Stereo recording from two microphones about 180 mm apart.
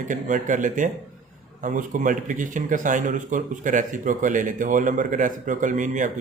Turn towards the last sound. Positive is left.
turn(degrees=-45)  # may be behind; listen again after turning